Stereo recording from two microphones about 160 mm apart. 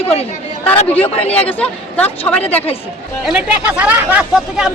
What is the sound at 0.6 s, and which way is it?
Speech, 10° left (ahead or behind).